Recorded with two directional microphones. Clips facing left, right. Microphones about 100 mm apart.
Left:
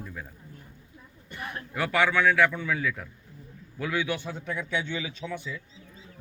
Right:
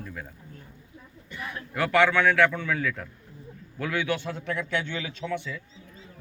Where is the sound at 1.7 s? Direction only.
15° left (ahead or behind).